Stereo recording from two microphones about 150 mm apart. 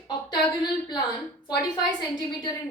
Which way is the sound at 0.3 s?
30° left (ahead or behind).